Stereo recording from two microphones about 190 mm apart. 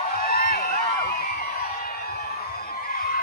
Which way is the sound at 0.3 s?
50° left (ahead or behind).